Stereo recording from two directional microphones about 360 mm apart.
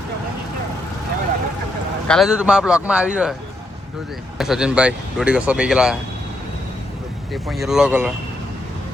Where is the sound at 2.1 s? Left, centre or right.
Centre.